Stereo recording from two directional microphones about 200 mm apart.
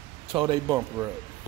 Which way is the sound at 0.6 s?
10° right (ahead or behind).